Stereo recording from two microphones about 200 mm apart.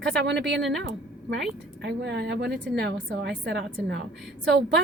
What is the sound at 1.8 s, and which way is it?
A woman's voice, 60° right (ahead or behind).